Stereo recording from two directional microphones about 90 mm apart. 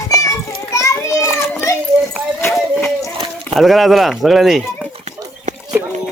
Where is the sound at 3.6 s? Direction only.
Centre (ahead or behind).